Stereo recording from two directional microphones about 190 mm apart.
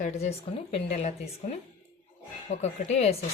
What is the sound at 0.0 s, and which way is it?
Speech, 35° left (ahead or behind).